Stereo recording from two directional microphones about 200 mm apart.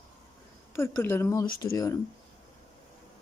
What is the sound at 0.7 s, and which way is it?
Speech, 10° left (ahead or behind).